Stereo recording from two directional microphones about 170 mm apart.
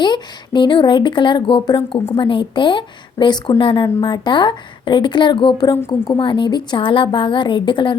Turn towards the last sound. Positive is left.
turn(degrees=30)  # may be behind; listen again after turning